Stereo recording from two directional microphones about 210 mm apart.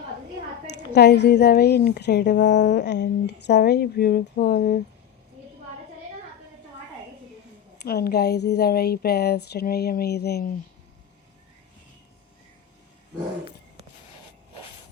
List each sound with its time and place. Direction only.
0.8 s speech: 55° left (ahead or behind)
7.8 s speech: 50° left (ahead or behind)